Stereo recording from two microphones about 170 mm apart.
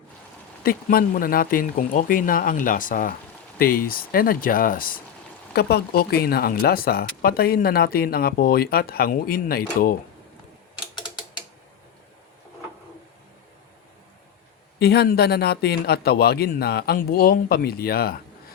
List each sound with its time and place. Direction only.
0.6 s speech: 60° left (ahead or behind)
5.5 s speech: 70° left (ahead or behind)
14.8 s speech: 70° left (ahead or behind)